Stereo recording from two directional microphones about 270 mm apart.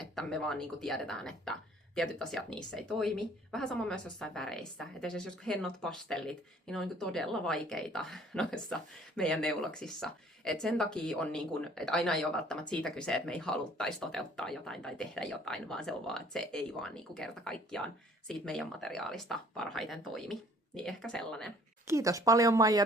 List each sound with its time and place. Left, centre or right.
0.0 s speech: centre
21.8 s speech: centre